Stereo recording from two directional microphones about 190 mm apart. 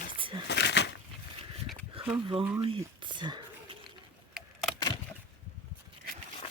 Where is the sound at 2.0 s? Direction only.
30° right (ahead or behind).